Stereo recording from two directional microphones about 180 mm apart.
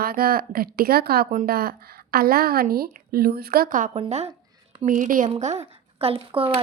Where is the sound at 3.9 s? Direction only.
35° right (ahead or behind).